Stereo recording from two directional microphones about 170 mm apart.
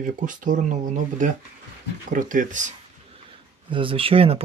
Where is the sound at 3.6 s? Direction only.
30° right (ahead or behind).